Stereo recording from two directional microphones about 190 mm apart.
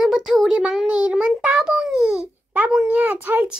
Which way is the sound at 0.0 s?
Centre (ahead or behind).